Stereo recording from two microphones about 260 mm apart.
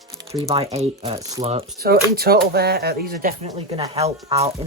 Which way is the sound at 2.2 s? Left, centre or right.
Right.